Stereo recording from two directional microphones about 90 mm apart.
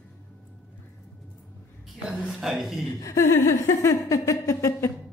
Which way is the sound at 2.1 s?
5° right (ahead or behind).